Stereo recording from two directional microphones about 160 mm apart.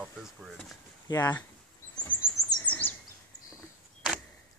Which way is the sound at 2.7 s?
10° left (ahead or behind).